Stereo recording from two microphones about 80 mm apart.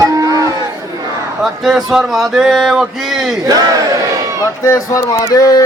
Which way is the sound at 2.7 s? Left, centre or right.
Centre.